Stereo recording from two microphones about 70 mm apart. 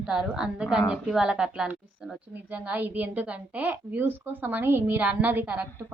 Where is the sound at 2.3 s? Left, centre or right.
Right.